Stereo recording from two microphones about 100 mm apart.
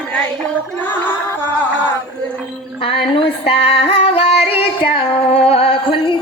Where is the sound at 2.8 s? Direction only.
65° left (ahead or behind).